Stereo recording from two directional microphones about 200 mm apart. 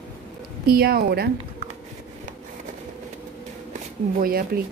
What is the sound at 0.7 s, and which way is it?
Speech, 50° right (ahead or behind).